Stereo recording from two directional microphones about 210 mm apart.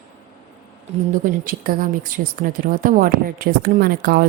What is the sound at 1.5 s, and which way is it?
A woman's voice, 40° right (ahead or behind).